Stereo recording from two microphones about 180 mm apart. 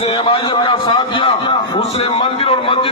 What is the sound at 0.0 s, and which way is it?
A man's voice, 30° left (ahead or behind).